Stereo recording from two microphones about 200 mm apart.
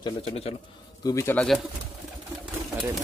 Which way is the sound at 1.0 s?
15° left (ahead or behind).